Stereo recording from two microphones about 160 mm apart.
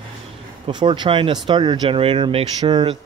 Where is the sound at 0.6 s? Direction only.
30° right (ahead or behind).